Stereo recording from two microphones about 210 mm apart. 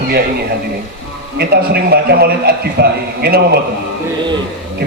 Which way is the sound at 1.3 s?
50° right (ahead or behind).